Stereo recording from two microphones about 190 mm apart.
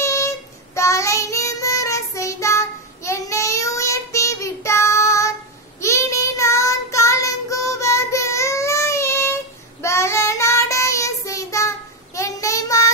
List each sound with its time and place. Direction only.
0.0 s child singing: 15° left (ahead or behind)